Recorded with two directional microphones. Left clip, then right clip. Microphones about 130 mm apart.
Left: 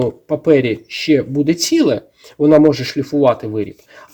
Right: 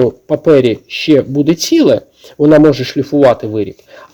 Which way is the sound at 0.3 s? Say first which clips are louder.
Right 3 dB; 40° right (ahead or behind).